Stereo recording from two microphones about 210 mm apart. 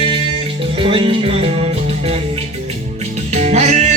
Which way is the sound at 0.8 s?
25° right (ahead or behind).